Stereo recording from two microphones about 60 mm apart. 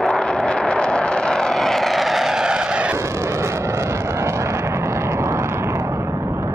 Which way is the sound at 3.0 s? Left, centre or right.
Right.